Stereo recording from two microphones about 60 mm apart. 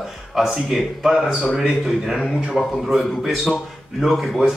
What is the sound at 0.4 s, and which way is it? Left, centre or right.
A man's voice, centre.